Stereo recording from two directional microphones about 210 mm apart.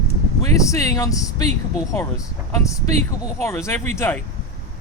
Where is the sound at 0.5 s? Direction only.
15° left (ahead or behind).